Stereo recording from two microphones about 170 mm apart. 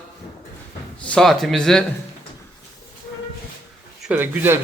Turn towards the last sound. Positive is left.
turn(degrees=-10)  # may be behind; listen again after turning